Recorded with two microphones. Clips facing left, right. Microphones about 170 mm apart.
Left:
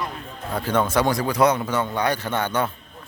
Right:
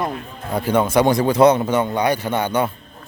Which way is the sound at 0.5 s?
10° right (ahead or behind).